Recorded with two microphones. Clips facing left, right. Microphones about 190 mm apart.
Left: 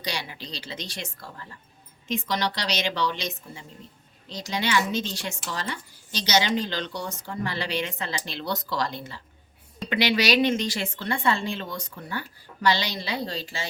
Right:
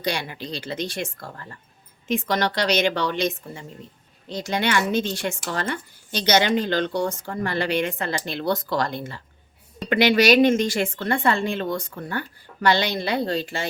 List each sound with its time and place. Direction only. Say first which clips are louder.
0.0 s speech: right 6 dB; 55° right (ahead or behind)